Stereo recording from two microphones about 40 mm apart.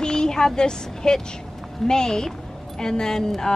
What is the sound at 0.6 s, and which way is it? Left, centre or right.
Speech, centre.